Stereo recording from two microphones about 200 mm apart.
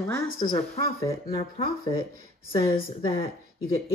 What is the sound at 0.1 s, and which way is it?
A woman's voice, 15° left (ahead or behind).